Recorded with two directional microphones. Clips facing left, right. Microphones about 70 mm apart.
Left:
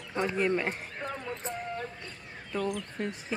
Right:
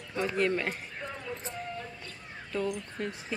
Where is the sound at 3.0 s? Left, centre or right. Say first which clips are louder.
Left 1 dB; left.